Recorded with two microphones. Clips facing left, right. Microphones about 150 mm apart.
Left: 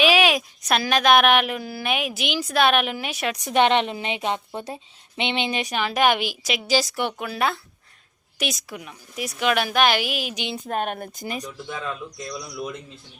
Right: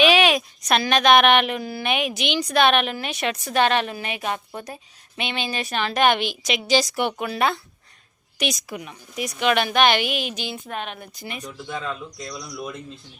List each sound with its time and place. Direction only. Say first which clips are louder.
0.0 s speech: right 1 dB; 5° left (ahead or behind)
3.4 s a woman's voice: left 2 dB; 20° left (ahead or behind); by 10.4 s 5° left (ahead or behind)
10.7 s speech: left 5 dB; 45° left (ahead or behind)